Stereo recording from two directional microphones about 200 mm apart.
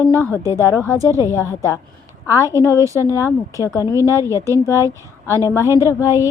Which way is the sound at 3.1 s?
15° left (ahead or behind).